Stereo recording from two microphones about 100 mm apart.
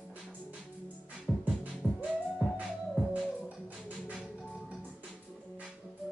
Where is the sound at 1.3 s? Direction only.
5° left (ahead or behind).